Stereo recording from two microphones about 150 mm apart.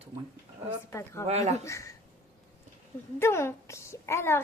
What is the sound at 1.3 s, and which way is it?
Speech, 45° right (ahead or behind).